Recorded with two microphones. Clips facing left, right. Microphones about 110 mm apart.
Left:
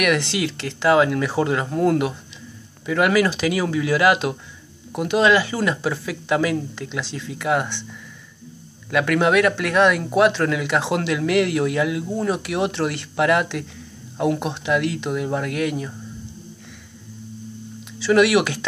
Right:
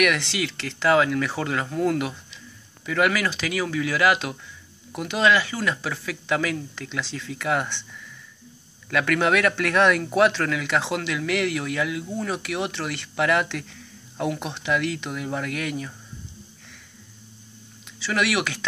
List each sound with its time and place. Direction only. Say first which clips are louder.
0.6 s speech: left 3 dB; 15° left (ahead or behind)
8.9 s speech: left 4 dB; 15° left (ahead or behind)
18.1 s speech: left 8 dB; 20° left (ahead or behind)